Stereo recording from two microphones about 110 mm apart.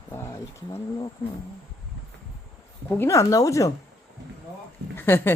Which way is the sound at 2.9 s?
25° left (ahead or behind).